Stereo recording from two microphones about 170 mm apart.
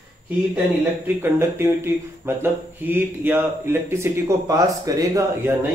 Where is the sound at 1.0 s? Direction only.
15° right (ahead or behind).